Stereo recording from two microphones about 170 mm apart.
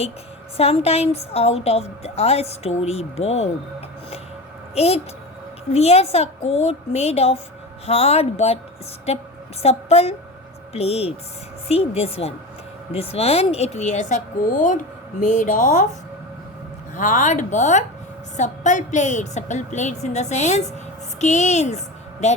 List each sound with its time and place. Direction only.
0.5 s a woman's voice: 35° left (ahead or behind)
16.9 s a woman's voice: 50° left (ahead or behind)